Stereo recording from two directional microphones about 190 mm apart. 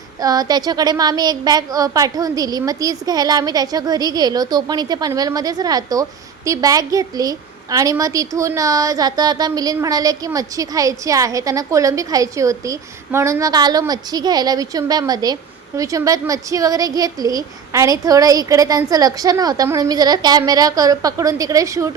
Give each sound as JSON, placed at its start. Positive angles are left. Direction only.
{"t": 0.2, "sound": "a woman's voice", "side_deg": -20}